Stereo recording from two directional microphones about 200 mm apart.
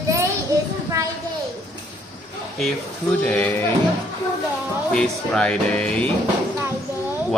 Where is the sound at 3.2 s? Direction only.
5° left (ahead or behind).